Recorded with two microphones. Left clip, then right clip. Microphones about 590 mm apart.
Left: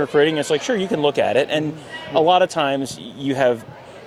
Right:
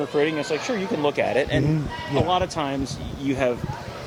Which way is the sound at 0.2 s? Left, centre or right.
Left.